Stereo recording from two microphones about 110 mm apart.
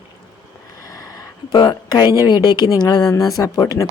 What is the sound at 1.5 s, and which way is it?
Speech, 40° left (ahead or behind).